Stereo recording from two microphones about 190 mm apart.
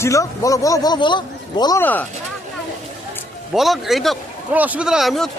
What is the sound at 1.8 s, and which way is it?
Speech, 10° left (ahead or behind).